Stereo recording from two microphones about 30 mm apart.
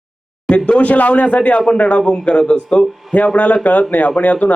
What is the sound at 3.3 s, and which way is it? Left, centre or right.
Speech, left.